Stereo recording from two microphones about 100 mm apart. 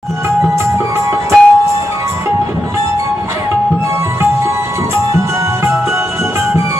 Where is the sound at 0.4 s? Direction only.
30° right (ahead or behind).